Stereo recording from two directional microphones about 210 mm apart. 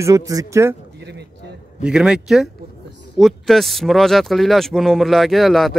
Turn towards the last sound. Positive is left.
turn(degrees=0)  # may be behind; listen again after turning